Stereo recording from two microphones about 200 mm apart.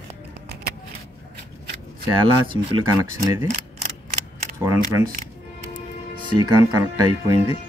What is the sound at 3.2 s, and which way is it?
Speech, 15° right (ahead or behind).